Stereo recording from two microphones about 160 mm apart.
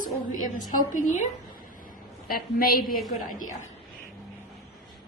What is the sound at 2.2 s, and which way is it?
Speech, 65° left (ahead or behind).